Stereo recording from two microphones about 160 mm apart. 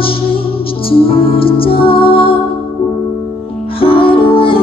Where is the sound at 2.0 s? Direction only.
70° left (ahead or behind).